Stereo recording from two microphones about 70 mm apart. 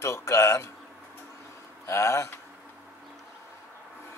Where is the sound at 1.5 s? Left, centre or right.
Left.